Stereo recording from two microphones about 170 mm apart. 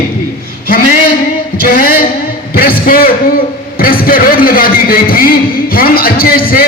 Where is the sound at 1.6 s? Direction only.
60° left (ahead or behind).